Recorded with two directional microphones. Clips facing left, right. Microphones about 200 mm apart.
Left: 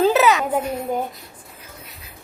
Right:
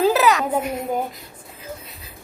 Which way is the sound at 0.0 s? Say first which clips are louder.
Left 1 dB; centre (ahead or behind).